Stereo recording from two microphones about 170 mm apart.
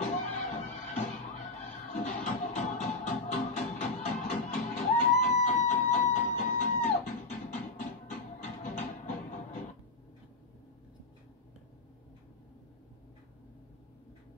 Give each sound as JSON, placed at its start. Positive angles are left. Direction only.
{"t": 0.0, "sound": "music", "side_deg": 45}